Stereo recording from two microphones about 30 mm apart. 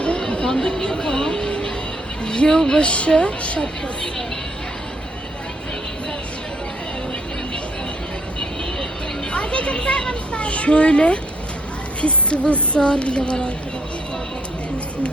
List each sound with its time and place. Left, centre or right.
0.4 s chatter: centre
0.7 s music: left
2.2 s speech: left
2.8 s a woman's voice: left
9.3 s a woman's voice: left
12.0 s music: left
12.8 s a woman's voice: left